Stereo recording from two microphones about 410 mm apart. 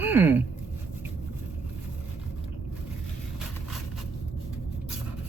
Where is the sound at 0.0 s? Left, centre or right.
Centre.